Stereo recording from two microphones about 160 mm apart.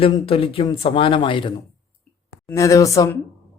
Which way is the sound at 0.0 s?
35° left (ahead or behind).